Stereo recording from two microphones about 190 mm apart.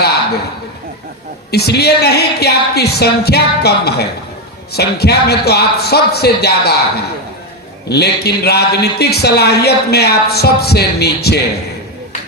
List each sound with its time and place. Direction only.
1.5 s a man's voice: 60° left (ahead or behind)